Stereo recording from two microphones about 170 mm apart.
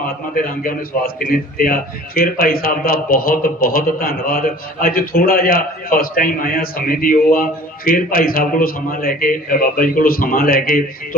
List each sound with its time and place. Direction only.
0.0 s a man's voice: 55° left (ahead or behind)